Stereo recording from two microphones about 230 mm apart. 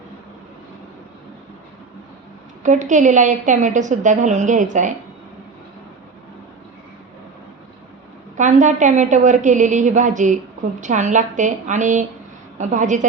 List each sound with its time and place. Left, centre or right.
2.6 s a woman's voice: right
8.4 s a woman's voice: right